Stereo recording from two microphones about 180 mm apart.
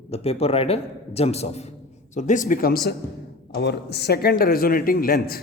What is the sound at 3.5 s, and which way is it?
A man's voice, 70° left (ahead or behind).